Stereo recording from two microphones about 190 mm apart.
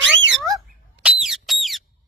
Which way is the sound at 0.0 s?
75° right (ahead or behind).